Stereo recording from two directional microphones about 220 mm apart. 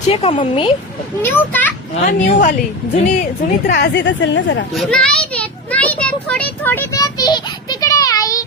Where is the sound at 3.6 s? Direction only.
50° left (ahead or behind).